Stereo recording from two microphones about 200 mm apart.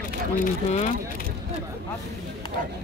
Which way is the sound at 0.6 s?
35° left (ahead or behind).